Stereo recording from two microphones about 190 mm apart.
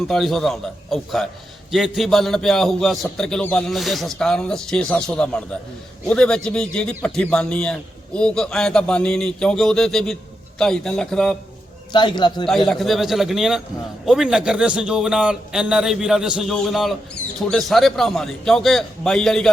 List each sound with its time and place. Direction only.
0.1 s a man's voice: centre (ahead or behind)
11.9 s a man's voice: 25° left (ahead or behind)
12.5 s a man's voice: centre (ahead or behind)